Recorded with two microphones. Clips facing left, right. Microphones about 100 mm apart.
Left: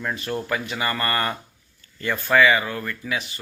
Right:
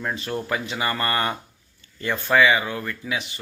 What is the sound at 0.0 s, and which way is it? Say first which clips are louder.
Speech: even; 20° right (ahead or behind).